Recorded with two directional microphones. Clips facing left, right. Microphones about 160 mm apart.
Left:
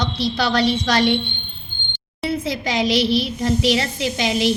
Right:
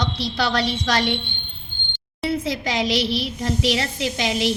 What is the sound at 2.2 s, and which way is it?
A woman's voice, 15° left (ahead or behind).